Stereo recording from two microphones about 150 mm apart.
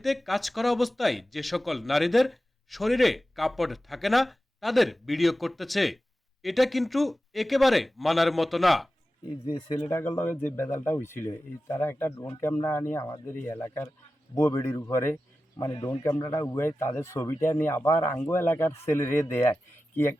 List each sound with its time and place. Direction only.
0.0 s speech: centre (ahead or behind)
9.2 s speech: 35° left (ahead or behind); by 12.1 s 15° left (ahead or behind)
12.1 s speech: 30° left (ahead or behind)
12.4 s a man's voice: 15° left (ahead or behind)